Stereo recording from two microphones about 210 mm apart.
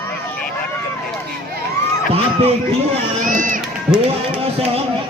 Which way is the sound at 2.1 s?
30° right (ahead or behind).